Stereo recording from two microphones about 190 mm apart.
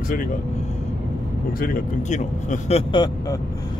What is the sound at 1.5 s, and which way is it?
A man's voice, 45° left (ahead or behind).